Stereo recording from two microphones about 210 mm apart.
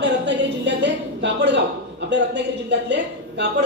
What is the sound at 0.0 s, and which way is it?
A woman's voice, 55° right (ahead or behind).